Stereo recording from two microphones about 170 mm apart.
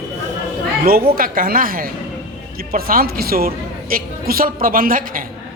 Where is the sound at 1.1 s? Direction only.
55° right (ahead or behind).